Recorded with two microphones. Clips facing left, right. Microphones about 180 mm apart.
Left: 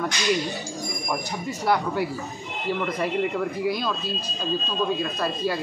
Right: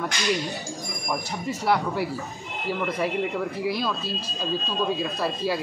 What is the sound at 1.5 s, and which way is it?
Speech, centre (ahead or behind).